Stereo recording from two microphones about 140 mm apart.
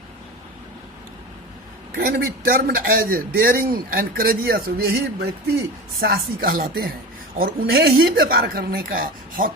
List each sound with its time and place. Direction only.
2.0 s a man's voice: 90° right
6.0 s a man's voice: 90° right